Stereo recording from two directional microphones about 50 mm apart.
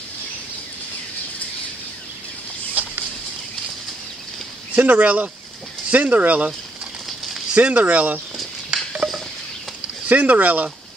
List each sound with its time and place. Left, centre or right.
4.7 s speech: right
7.5 s speech: right
8.6 s a sound: centre
10.0 s speech: right